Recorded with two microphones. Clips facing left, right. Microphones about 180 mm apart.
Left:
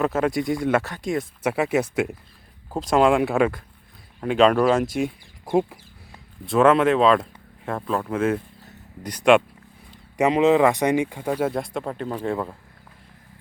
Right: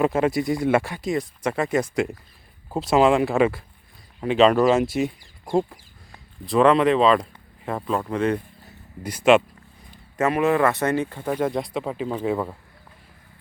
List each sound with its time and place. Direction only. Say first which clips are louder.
0.0 s speech: right 1 dB; 10° right (ahead or behind)
1.1 s speech: left 1 dB; 5° left (ahead or behind)
2.6 s speech: right 1 dB; 5° right (ahead or behind)
10.2 s speech: left 3 dB; 15° left (ahead or behind); by 12.5 s 5° right (ahead or behind)